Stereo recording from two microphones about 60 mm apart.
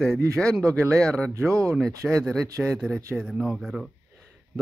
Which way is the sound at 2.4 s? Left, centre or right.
Right.